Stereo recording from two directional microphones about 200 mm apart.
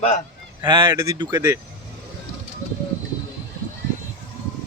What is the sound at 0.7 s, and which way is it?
Speech, 25° right (ahead or behind).